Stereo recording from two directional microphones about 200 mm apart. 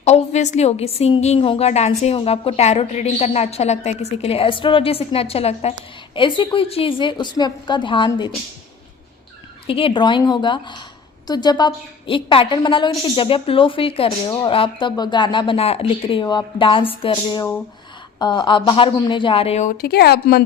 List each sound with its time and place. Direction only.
0.0 s a woman's voice: 35° left (ahead or behind)
9.6 s a woman's voice: 25° left (ahead or behind)
19.7 s speech: 50° left (ahead or behind)